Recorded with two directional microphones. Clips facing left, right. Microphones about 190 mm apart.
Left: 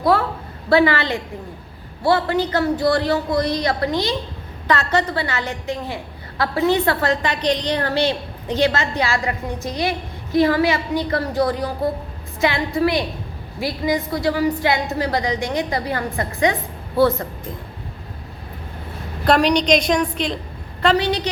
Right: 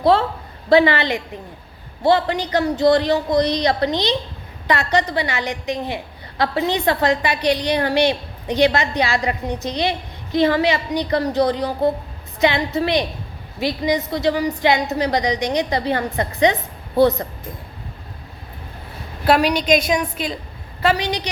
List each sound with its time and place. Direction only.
0.0 s a woman's voice: 25° right (ahead or behind)
19.2 s a woman's voice: 5° right (ahead or behind)